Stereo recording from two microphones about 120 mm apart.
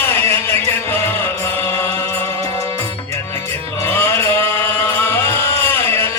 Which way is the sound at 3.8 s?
20° left (ahead or behind).